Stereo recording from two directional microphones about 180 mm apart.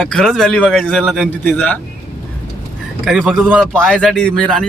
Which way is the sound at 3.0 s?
5° right (ahead or behind).